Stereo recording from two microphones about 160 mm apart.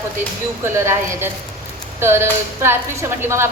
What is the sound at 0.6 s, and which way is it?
A woman's voice, 15° right (ahead or behind).